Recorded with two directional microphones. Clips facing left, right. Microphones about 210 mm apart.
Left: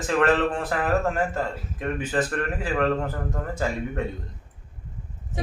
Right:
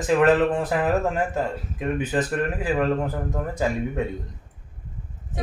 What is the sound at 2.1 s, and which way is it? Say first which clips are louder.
A man's voice: right 2 dB; 15° right (ahead or behind).